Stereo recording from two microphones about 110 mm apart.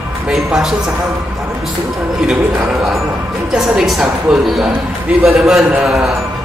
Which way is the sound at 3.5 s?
5° right (ahead or behind).